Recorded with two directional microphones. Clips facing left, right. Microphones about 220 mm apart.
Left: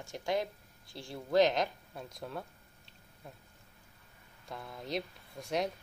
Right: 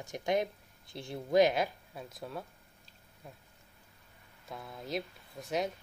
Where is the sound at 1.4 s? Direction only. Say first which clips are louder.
Right 1 dB; 10° right (ahead or behind).